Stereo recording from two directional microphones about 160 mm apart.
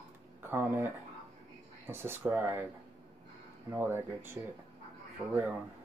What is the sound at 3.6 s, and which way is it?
Speech, 15° right (ahead or behind).